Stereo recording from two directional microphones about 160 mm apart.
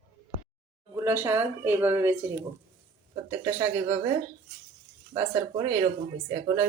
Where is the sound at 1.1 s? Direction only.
15° right (ahead or behind).